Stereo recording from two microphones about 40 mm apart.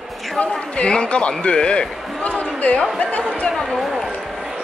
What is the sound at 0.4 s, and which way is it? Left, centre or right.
A man's voice, left.